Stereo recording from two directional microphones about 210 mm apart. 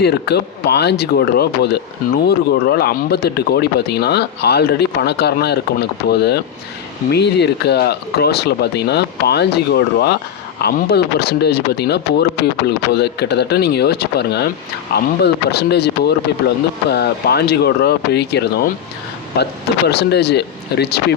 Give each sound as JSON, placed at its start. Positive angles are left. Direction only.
{"t": 0.0, "sound": "speech", "side_deg": 50}
{"t": 19.9, "sound": "speech", "side_deg": 50}